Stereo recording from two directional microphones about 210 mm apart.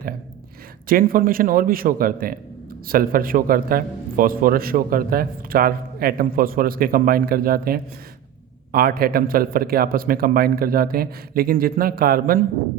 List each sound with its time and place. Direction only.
0.9 s a man's voice: 40° right (ahead or behind)